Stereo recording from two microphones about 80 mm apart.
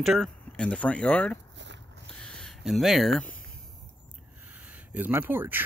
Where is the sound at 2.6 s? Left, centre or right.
Centre.